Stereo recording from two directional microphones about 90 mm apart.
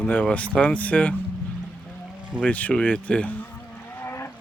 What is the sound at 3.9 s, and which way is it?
Vehicle, 30° left (ahead or behind).